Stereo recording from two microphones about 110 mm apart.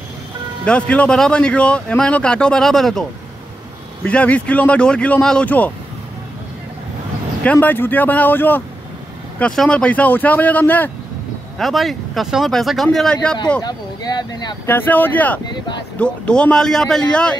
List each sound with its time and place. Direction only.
0.7 s speech: 10° left (ahead or behind)
7.6 s speech: 15° left (ahead or behind)
11.5 s speech: centre (ahead or behind)
13.6 s speech: 35° left (ahead or behind)
14.7 s speech: 15° left (ahead or behind)